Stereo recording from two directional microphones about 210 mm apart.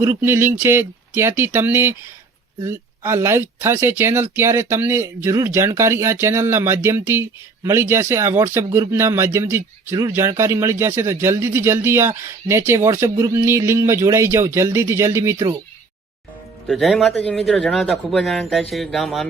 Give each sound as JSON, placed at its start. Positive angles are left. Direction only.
{"t": 0.0, "sound": "speech", "side_deg": -10}
{"t": 16.6, "sound": "a man's voice", "side_deg": 0}